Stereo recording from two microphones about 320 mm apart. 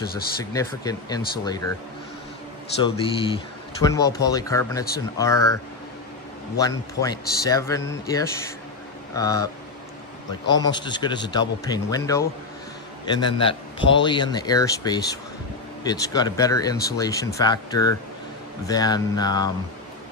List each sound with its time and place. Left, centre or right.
0.5 s speech: centre
2.8 s speech: centre
6.6 s speech: centre
10.7 s a man's voice: centre